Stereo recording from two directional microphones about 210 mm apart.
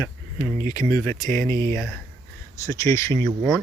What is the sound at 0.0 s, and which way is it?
Speech, 15° left (ahead or behind).